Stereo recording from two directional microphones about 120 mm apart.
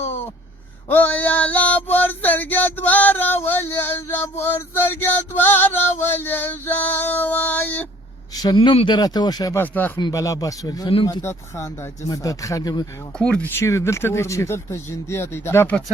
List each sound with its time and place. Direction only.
0.9 s male singing: 15° left (ahead or behind)
8.3 s a sound: 30° left (ahead or behind)
8.5 s speech: 45° left (ahead or behind)
9.6 s speech: 15° left (ahead or behind)
10.0 s speech: 30° left (ahead or behind)
10.8 s speech: 45° left (ahead or behind)
11.2 s speech: 25° left (ahead or behind)
13.1 s speech: 10° left (ahead or behind)